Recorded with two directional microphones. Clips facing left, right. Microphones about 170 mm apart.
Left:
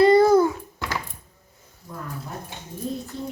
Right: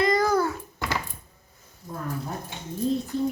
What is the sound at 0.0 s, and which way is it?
Babbling, 30° left (ahead or behind).